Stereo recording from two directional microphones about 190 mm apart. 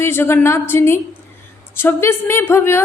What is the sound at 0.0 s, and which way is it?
A woman's voice, 10° left (ahead or behind).